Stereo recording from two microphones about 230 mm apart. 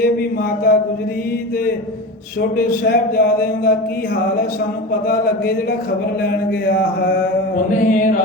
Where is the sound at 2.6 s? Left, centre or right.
Left.